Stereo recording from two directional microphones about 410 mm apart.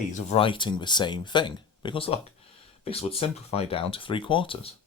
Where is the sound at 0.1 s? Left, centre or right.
Centre.